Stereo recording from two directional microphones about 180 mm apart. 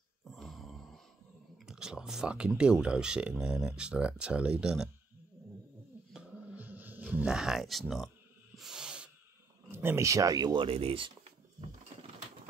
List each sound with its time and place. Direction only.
0.3 s a sound: centre (ahead or behind)
1.7 s speech: 5° right (ahead or behind)
6.1 s music: 10° right (ahead or behind)
8.5 s snort: 5° right (ahead or behind)
9.7 s speech: 15° right (ahead or behind); by 11.1 s 30° right (ahead or behind)